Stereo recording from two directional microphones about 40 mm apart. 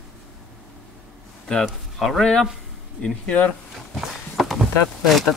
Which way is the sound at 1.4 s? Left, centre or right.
Centre.